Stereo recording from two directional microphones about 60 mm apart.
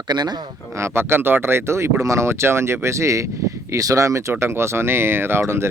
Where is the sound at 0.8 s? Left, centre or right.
Right.